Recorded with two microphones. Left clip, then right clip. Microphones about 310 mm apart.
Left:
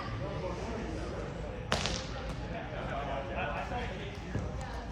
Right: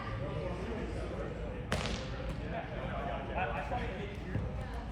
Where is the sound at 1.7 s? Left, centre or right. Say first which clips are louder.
Left 4 dB; centre.